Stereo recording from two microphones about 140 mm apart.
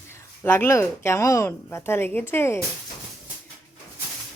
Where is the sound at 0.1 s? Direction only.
15° left (ahead or behind).